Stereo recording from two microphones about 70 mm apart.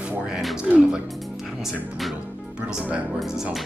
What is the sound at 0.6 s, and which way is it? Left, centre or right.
Speech, centre.